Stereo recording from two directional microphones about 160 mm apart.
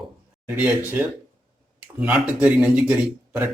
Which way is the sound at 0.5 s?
10° right (ahead or behind).